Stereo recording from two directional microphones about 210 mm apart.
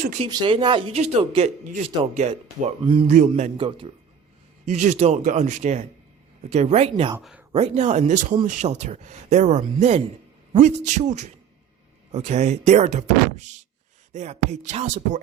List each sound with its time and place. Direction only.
0.2 s a man's voice: 20° right (ahead or behind)
7.2 s speech: centre (ahead or behind)
7.5 s speech: 30° right (ahead or behind)